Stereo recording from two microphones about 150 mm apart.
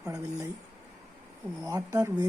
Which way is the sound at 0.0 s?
20° right (ahead or behind).